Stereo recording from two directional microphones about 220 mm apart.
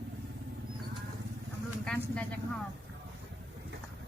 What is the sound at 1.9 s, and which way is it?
Speech, 5° left (ahead or behind).